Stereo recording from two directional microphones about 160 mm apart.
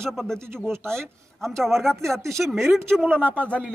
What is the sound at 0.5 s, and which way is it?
Speech, 15° right (ahead or behind).